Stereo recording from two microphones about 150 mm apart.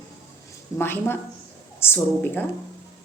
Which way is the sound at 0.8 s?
15° left (ahead or behind).